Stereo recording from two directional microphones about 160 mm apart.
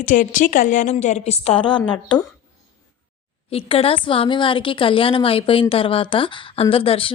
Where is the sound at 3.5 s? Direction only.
35° left (ahead or behind).